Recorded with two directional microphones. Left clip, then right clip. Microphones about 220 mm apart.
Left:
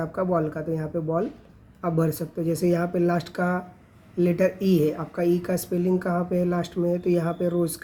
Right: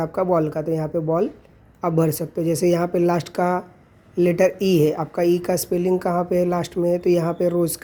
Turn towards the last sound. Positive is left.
turn(degrees=-25)  # may be behind; listen again after turning